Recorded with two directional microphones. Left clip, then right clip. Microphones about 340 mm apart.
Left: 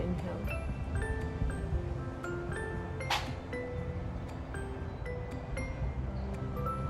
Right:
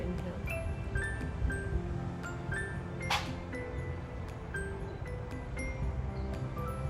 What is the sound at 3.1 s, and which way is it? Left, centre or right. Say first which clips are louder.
Music: even; left.